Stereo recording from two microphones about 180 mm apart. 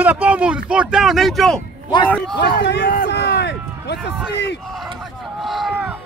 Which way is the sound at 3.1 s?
70° left (ahead or behind).